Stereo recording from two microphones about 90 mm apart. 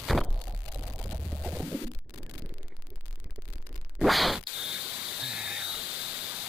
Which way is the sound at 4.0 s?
Centre (ahead or behind).